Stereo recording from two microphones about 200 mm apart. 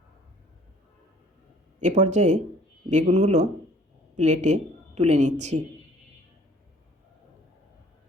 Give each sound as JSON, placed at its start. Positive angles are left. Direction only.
{"t": 1.8, "sound": "a woman's voice", "side_deg": -35}